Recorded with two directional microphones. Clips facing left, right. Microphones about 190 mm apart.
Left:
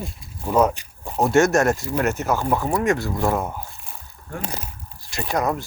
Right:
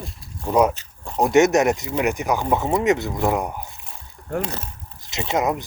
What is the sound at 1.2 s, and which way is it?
Speech, 20° right (ahead or behind).